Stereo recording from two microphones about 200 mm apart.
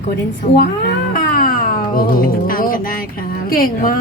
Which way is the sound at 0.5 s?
50° left (ahead or behind).